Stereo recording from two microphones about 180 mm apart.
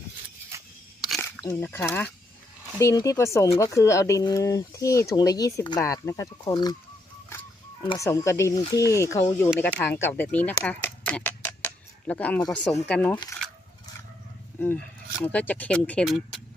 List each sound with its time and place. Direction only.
0.5 s a sound: 15° right (ahead or behind)
1.2 s speech: 10° left (ahead or behind)
7.9 s speech: 20° left (ahead or behind)
15.2 s speech: 10° left (ahead or behind)